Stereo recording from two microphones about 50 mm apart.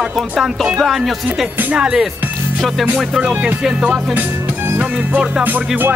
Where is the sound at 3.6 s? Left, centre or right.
Centre.